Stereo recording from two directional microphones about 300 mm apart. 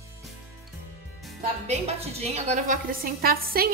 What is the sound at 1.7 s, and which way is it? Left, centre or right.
A woman's voice, right.